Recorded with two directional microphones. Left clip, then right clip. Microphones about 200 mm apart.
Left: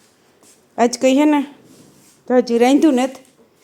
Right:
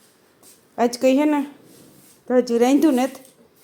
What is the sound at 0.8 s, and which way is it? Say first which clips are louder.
Speech: left 3 dB; 15° left (ahead or behind).